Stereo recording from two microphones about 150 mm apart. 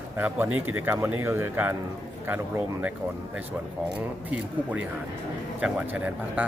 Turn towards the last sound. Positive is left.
turn(degrees=-10)  # may be behind; listen again after turning